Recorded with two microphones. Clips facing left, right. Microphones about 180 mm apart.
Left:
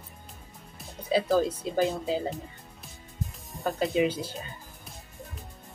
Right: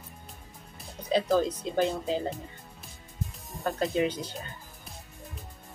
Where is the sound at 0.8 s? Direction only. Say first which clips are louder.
Left 1 dB; 5° left (ahead or behind).